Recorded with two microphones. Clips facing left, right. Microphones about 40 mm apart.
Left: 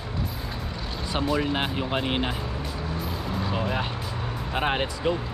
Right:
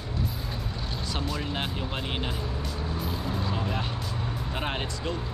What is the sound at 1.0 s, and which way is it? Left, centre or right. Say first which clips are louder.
Speech: left 8 dB; left.